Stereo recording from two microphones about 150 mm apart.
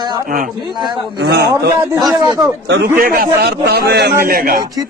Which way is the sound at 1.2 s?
90° right.